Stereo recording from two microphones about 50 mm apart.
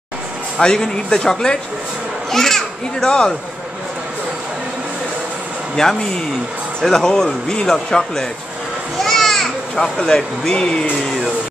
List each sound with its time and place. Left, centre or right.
0.6 s a man's voice: centre
5.8 s a man's voice: centre